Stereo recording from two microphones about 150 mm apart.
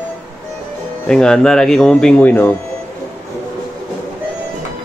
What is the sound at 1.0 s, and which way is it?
Speech, 5° left (ahead or behind).